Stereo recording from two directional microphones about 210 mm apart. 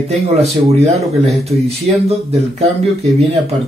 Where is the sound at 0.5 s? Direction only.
30° right (ahead or behind).